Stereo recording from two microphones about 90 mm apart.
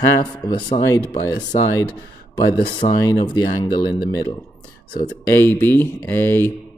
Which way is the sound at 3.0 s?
50° left (ahead or behind).